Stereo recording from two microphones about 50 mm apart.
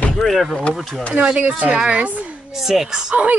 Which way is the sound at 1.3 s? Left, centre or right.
Right.